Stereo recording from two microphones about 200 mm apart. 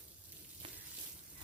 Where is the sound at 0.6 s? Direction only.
25° right (ahead or behind).